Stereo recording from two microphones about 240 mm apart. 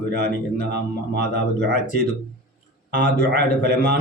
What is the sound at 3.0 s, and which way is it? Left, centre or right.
Speech, right.